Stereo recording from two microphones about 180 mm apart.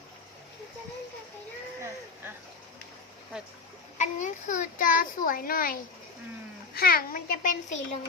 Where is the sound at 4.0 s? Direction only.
45° left (ahead or behind).